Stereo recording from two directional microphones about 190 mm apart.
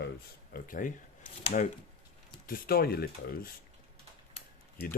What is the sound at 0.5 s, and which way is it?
Speech, 45° left (ahead or behind).